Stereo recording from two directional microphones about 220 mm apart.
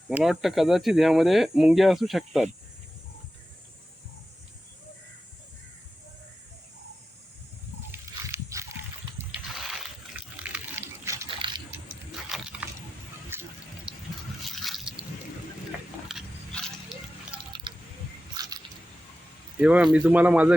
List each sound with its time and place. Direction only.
0.1 s speech: centre (ahead or behind)
8.3 s a sound: 15° right (ahead or behind)
9.6 s pig: 5° right (ahead or behind)
11.3 s a sound: 25° right (ahead or behind)
12.3 s biting: 5° right (ahead or behind)
13.3 s water: 10° right (ahead or behind)
14.4 s drip: centre (ahead or behind)
16.1 s biting: 5° right (ahead or behind)
17.3 s water: 20° right (ahead or behind)
18.4 s squish: 20° right (ahead or behind)
19.5 s speech: 5° right (ahead or behind)